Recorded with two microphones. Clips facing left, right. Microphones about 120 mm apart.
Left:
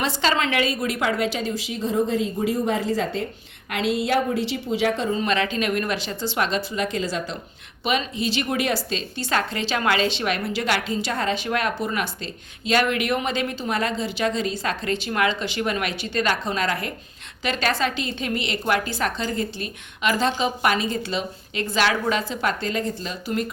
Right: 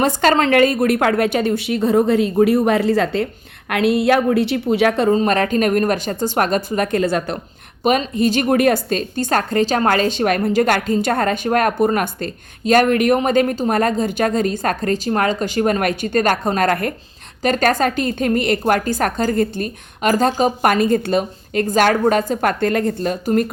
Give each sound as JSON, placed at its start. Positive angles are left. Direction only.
{"t": 0.0, "sound": "a woman's voice", "side_deg": -50}
{"t": 5.1, "sound": "a woman's voice", "side_deg": -45}
{"t": 7.9, "sound": "a woman's voice", "side_deg": -50}